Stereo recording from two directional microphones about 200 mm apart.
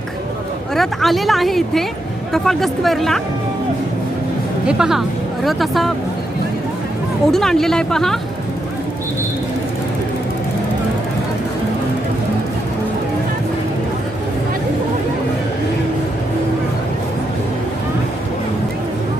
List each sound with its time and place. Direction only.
0.7 s speech: centre (ahead or behind)
4.6 s speech: 5° right (ahead or behind)
7.3 s speech: centre (ahead or behind)